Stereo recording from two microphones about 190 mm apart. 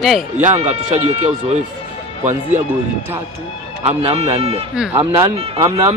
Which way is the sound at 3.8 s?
30° right (ahead or behind).